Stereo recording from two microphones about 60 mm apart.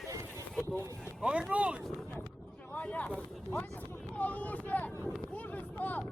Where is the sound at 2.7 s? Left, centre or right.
Left.